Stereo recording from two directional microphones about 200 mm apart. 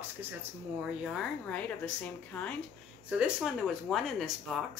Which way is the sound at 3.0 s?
5° right (ahead or behind).